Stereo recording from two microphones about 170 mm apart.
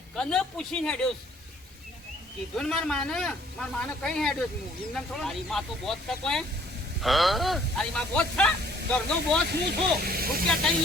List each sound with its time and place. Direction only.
0.2 s speech: 5° left (ahead or behind)
2.6 s speech: 5° left (ahead or behind)
9.5 s speech: 75° right (ahead or behind)